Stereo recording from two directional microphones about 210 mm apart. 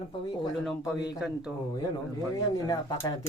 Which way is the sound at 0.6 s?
Centre (ahead or behind).